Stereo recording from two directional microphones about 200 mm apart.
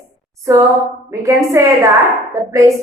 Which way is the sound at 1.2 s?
15° right (ahead or behind).